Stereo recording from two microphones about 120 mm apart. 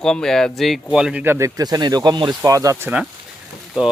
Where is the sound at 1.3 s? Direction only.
30° right (ahead or behind).